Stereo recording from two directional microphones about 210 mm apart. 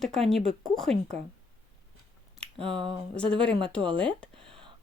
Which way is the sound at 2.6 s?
25° right (ahead or behind).